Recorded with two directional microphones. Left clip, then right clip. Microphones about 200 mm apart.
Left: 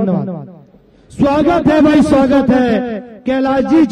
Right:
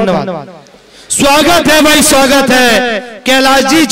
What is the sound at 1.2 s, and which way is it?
Speech, 10° right (ahead or behind).